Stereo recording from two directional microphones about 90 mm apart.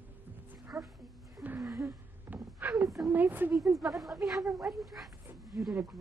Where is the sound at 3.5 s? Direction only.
Centre (ahead or behind).